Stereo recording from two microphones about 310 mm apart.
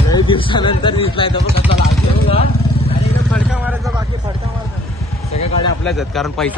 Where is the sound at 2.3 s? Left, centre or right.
Centre.